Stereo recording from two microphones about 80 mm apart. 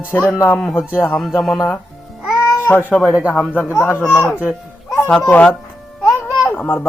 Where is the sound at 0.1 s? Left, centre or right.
Left.